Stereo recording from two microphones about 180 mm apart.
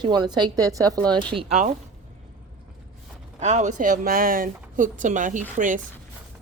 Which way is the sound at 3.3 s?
40° right (ahead or behind).